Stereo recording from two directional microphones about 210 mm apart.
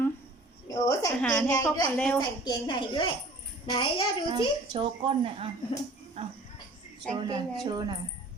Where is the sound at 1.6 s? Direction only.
15° left (ahead or behind).